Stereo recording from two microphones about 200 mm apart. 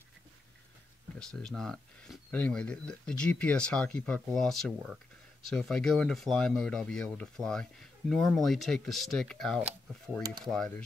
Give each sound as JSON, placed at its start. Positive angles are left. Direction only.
{"t": 1.2, "sound": "speech", "side_deg": 5}